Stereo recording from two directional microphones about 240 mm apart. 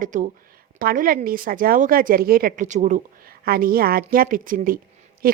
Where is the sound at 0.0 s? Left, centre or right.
Right.